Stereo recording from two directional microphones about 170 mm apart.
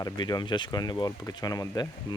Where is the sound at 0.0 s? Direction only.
25° left (ahead or behind).